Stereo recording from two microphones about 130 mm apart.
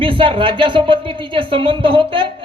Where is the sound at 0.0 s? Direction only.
40° right (ahead or behind).